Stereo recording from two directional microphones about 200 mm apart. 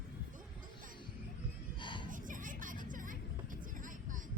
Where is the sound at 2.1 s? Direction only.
40° right (ahead or behind).